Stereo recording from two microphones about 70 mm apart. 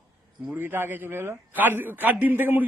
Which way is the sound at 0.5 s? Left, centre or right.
Right.